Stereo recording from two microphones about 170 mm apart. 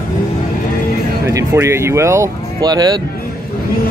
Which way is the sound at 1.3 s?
15° right (ahead or behind).